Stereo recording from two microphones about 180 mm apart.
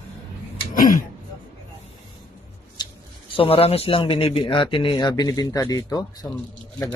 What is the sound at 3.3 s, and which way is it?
A man's voice, 35° left (ahead or behind).